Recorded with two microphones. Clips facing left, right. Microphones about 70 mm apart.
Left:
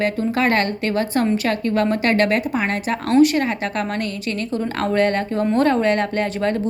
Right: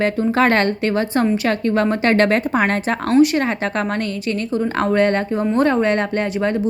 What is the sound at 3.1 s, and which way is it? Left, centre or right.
A woman's voice, right.